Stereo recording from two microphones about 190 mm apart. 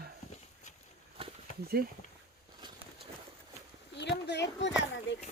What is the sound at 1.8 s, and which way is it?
Speech, 55° right (ahead or behind).